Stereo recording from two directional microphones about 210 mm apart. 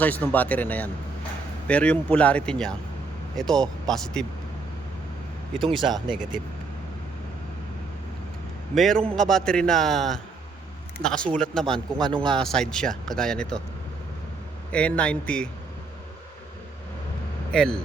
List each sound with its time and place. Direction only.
0.0 s speech: 10° left (ahead or behind)
5.6 s speech: 20° right (ahead or behind)
8.7 s speech: centre (ahead or behind)
11.9 s speech: 20° right (ahead or behind)
12.2 s speech: 5° left (ahead or behind)
14.7 s speech: 5° left (ahead or behind)
17.5 s speech: 5° left (ahead or behind)